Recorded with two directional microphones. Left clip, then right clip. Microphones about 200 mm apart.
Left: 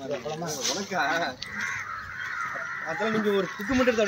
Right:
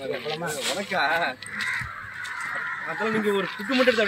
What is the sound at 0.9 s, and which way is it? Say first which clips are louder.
Speech: right 3 dB; centre (ahead or behind).